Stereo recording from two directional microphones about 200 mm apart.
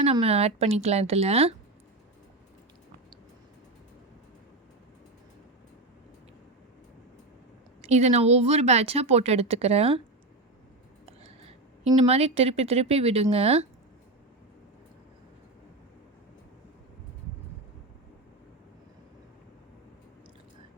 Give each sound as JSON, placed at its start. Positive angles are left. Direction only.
{"t": 0.0, "sound": "speech", "side_deg": -30}
{"t": 7.8, "sound": "speech", "side_deg": -35}
{"t": 11.0, "sound": "a woman's voice", "side_deg": -30}